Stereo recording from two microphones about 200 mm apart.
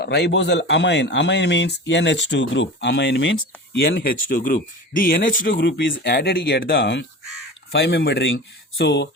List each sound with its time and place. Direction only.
0.0 s speech: 55° left (ahead or behind)